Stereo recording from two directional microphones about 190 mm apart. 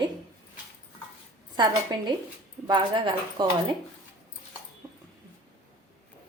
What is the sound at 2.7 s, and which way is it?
Speech, 25° right (ahead or behind).